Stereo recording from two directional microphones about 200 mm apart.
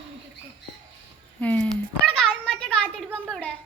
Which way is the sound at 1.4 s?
5° left (ahead or behind).